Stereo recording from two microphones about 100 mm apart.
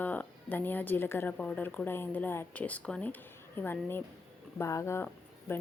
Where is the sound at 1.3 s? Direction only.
10° left (ahead or behind).